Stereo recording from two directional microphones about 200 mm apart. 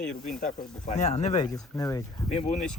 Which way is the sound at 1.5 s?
15° left (ahead or behind).